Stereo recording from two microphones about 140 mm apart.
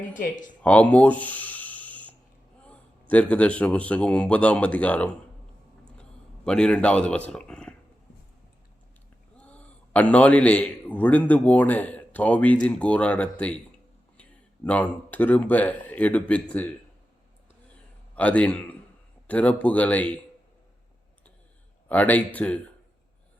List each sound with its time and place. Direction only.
0.1 s speech: 65° left (ahead or behind)
0.6 s a sound: 10° left (ahead or behind)
2.6 s a man's voice: 10° left (ahead or behind)
6.0 s a sound: 5° left (ahead or behind)
7.3 s speech: 5° left (ahead or behind)
9.4 s a man's voice: 10° left (ahead or behind)
18.2 s a man's voice: 10° left (ahead or behind)
21.8 s a man's voice: 10° left (ahead or behind)